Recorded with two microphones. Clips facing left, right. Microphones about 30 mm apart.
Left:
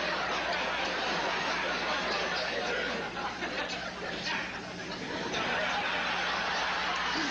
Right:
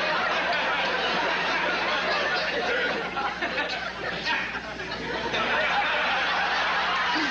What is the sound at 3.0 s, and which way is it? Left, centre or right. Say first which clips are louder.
Chatter: right 7 dB; right.